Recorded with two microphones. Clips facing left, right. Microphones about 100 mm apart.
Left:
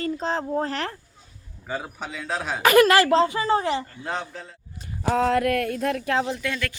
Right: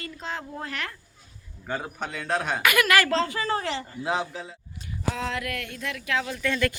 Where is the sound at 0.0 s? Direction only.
35° left (ahead or behind).